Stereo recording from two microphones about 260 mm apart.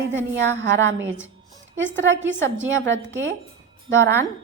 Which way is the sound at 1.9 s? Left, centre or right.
Right.